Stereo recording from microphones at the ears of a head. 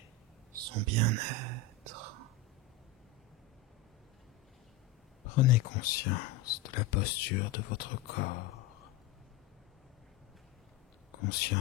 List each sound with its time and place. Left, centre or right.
0.5 s whispering: right
5.2 s speech: left
11.1 s a sound: left